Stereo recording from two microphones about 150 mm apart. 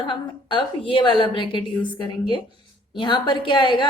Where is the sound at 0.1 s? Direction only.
35° left (ahead or behind).